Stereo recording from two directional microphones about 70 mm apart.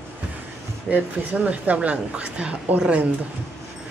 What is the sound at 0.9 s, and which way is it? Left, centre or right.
A woman's voice, right.